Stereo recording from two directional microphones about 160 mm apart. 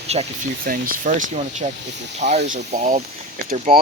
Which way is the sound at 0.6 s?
60° right (ahead or behind).